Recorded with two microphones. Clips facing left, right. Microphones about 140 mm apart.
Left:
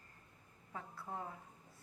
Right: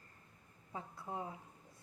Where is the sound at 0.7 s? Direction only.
15° right (ahead or behind).